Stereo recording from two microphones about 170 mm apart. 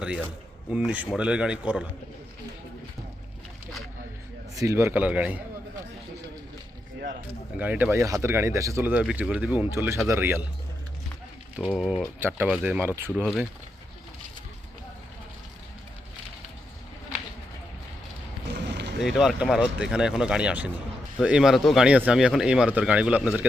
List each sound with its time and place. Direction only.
0.7 s speech: 5° right (ahead or behind)
4.5 s speech: 15° right (ahead or behind)
7.6 s speech: 10° right (ahead or behind)
11.5 s speech: 5° right (ahead or behind)
12.2 s speech: 10° right (ahead or behind)
18.5 s boat: 85° right
19.0 s speech: centre (ahead or behind)